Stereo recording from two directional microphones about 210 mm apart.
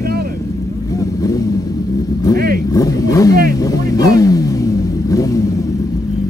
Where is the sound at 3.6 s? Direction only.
15° left (ahead or behind).